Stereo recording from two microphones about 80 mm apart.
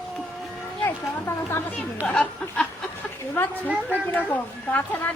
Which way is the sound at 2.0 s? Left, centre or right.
Centre.